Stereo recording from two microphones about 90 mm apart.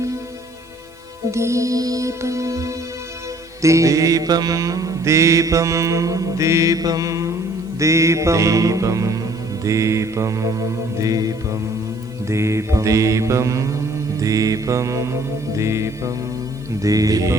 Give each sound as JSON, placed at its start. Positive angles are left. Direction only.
{"t": 1.3, "sound": "mantra", "side_deg": -30}